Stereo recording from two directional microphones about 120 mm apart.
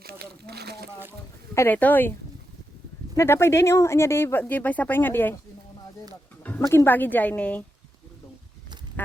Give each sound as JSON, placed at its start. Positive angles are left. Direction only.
{"t": 1.5, "sound": "speech", "side_deg": 15}
{"t": 3.2, "sound": "speech", "side_deg": 20}
{"t": 6.4, "sound": "speech", "side_deg": 20}